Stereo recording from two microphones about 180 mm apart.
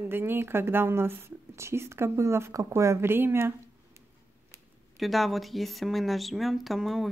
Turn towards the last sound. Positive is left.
turn(degrees=0)  # may be behind; listen again after turning